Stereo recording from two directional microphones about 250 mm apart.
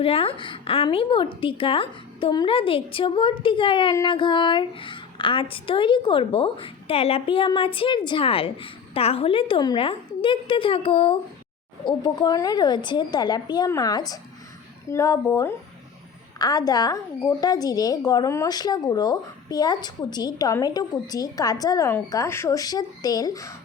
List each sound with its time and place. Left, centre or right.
0.0 s a woman's voice: left